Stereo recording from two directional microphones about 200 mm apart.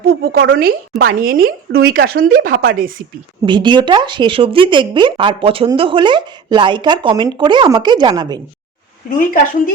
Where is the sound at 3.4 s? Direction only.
25° right (ahead or behind).